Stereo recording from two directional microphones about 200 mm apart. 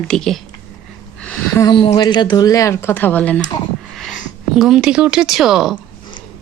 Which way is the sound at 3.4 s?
20° left (ahead or behind).